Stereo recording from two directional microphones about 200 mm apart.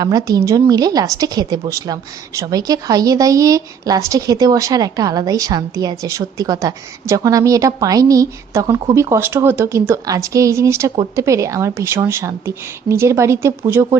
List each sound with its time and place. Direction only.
0.0 s a woman's voice: 20° right (ahead or behind)